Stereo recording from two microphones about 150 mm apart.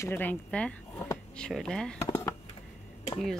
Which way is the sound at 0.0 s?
15° left (ahead or behind).